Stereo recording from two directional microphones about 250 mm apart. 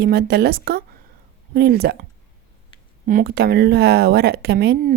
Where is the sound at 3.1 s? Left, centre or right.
Right.